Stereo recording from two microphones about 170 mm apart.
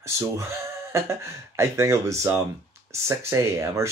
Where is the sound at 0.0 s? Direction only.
15° right (ahead or behind).